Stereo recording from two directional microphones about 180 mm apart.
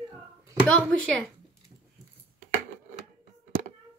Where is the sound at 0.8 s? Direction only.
5° left (ahead or behind).